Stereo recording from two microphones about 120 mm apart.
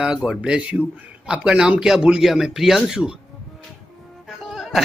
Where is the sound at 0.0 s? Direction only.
5° right (ahead or behind).